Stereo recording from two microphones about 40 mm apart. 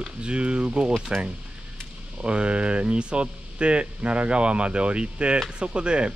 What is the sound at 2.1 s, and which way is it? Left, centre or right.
Speech, right.